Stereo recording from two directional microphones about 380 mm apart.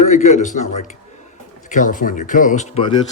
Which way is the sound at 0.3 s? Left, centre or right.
Centre.